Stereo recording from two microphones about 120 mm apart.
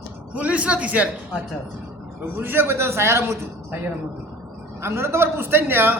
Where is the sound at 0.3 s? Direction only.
10° right (ahead or behind).